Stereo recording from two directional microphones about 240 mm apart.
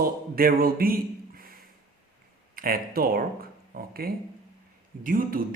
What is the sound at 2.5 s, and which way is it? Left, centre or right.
Speech, right.